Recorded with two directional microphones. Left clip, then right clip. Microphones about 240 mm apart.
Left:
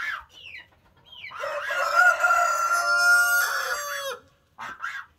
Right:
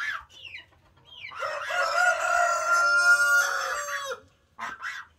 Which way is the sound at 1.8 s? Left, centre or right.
Centre.